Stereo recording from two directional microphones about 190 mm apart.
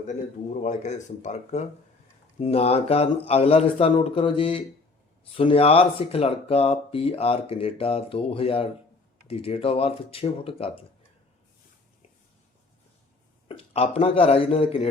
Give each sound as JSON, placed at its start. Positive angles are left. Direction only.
{"t": 0.6, "sound": "speech", "side_deg": 40}
{"t": 13.5, "sound": "speech", "side_deg": 35}